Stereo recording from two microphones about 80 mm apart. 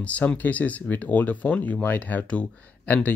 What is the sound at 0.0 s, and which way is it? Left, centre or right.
Speech, centre.